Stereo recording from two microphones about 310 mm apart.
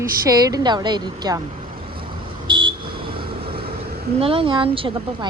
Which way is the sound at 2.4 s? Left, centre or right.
Centre.